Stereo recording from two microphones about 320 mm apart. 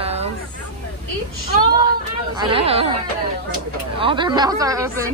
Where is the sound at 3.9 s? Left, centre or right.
Centre.